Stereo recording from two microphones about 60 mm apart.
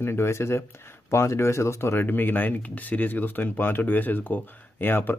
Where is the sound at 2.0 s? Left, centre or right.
Left.